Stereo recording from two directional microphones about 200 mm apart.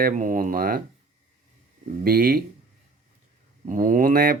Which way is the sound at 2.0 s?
50° right (ahead or behind).